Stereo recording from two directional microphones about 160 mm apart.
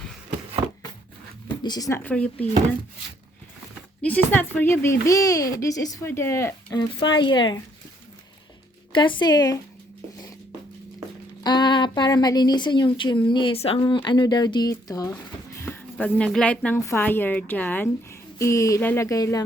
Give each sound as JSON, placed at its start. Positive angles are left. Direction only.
{"t": 0.6, "sound": "chopping", "side_deg": -25}
{"t": 1.5, "sound": "speech", "side_deg": 25}
{"t": 4.0, "sound": "speech", "side_deg": 10}
{"t": 6.7, "sound": "speech", "side_deg": 30}
{"t": 8.9, "sound": "speech", "side_deg": 30}
{"t": 11.4, "sound": "a woman's voice", "side_deg": 25}
{"t": 15.6, "sound": "speech", "side_deg": 10}